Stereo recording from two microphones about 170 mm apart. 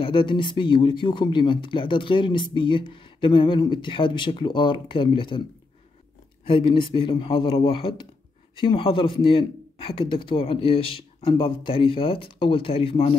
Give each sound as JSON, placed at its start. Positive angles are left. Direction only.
{"t": 0.0, "sound": "speech", "side_deg": 30}
{"t": 6.4, "sound": "speech", "side_deg": 30}